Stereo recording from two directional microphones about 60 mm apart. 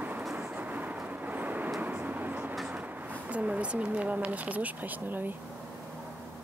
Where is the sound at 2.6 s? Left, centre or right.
Centre.